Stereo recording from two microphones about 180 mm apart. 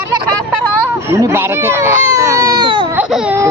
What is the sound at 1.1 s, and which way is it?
Speech, 15° right (ahead or behind).